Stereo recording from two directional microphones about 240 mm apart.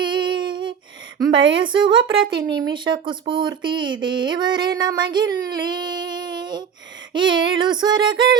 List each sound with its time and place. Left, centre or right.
0.0 s humming: centre
1.3 s a woman's voice: right
1.6 s speech: centre
7.1 s female singing: centre